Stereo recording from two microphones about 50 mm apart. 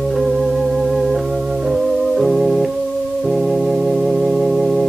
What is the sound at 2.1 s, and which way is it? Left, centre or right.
Organ, centre.